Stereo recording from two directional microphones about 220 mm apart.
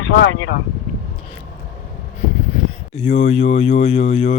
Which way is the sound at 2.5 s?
30° left (ahead or behind).